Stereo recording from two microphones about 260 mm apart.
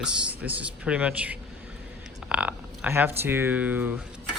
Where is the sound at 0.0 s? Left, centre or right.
Centre.